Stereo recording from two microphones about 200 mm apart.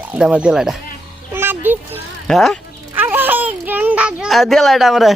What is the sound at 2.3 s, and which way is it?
Speech, centre (ahead or behind).